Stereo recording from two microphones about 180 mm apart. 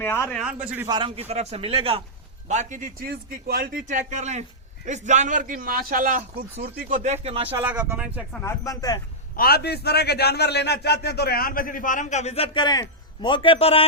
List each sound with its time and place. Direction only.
0.0 s a man's voice: 15° left (ahead or behind)
0.3 s a man's voice: 5° right (ahead or behind)
0.9 s a man's voice: 25° right (ahead or behind)
2.5 s a man's voice: 45° right (ahead or behind)
3.8 s a man's voice: 40° right (ahead or behind)
7.5 s speech: 10° right (ahead or behind)
8.4 s speech: 15° left (ahead or behind)
9.3 s a man's voice: 55° left (ahead or behind); by 13.8 s 30° left (ahead or behind)